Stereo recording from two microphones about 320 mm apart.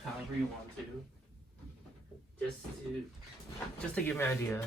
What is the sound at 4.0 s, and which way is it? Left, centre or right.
Speech, centre.